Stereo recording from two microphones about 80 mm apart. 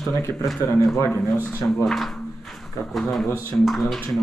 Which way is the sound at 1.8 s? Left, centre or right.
Centre.